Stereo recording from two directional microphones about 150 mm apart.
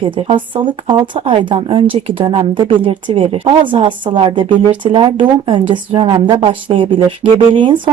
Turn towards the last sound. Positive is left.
turn(degrees=-35)  # may be behind; listen again after turning